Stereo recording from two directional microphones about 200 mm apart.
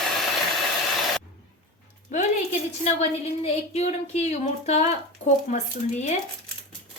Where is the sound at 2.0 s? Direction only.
35° left (ahead or behind).